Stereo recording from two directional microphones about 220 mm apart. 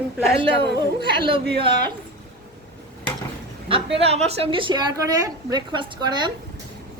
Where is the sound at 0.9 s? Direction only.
25° right (ahead or behind).